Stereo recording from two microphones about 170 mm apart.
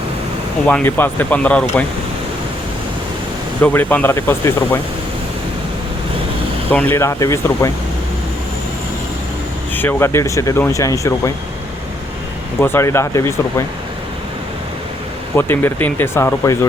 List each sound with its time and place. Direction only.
0.7 s speech: 10° left (ahead or behind)
3.6 s speech: 10° left (ahead or behind)
6.7 s speech: 10° left (ahead or behind)
9.7 s speech: 15° left (ahead or behind)
12.5 s speech: 15° left (ahead or behind)
15.4 s speech: 10° left (ahead or behind)